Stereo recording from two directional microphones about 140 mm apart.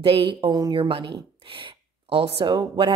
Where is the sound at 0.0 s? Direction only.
35° right (ahead or behind).